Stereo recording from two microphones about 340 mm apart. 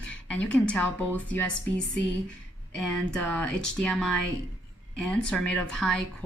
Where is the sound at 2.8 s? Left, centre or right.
Centre.